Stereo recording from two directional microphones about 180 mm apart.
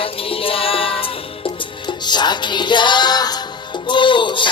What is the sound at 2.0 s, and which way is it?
Music, 25° left (ahead or behind).